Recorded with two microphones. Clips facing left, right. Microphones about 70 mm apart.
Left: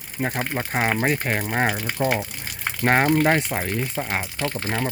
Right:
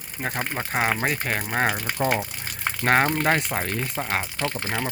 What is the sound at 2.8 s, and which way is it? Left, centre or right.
Speech, centre.